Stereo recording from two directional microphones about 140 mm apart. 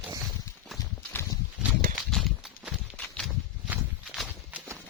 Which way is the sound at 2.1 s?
Centre (ahead or behind).